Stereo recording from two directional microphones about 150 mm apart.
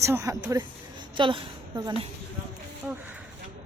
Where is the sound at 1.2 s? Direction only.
35° right (ahead or behind).